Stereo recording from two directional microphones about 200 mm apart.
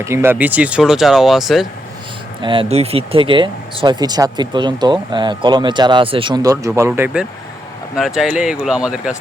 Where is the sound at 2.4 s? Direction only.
25° right (ahead or behind).